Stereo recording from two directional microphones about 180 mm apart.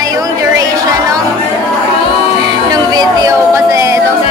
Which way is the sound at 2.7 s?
20° right (ahead or behind).